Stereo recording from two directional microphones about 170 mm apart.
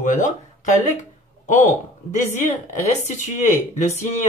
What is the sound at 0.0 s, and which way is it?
Speech, 50° left (ahead or behind).